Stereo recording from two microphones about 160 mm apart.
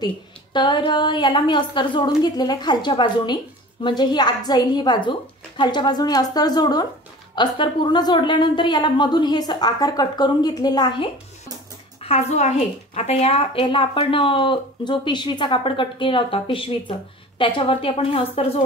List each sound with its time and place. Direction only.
0.0 s a woman's voice: 30° left (ahead or behind)
12.0 s a woman's voice: 40° left (ahead or behind)